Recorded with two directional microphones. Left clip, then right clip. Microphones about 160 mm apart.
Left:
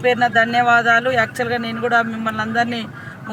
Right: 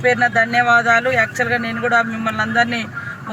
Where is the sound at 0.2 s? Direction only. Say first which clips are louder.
Even; 40° left (ahead or behind).